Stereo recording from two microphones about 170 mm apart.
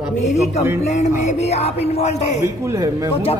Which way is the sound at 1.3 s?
40° left (ahead or behind).